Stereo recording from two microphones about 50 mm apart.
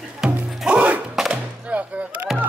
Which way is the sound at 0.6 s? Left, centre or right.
Right.